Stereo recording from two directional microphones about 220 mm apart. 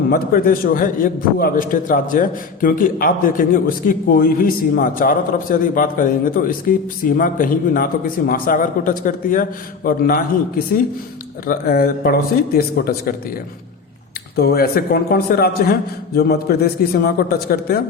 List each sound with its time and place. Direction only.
0.1 s a man's voice: 40° left (ahead or behind)
11.4 s a man's voice: 45° left (ahead or behind)
14.3 s a man's voice: 45° left (ahead or behind)